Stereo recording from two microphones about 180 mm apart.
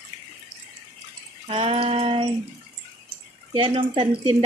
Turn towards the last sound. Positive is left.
turn(degrees=-30)  # may be behind; listen again after turning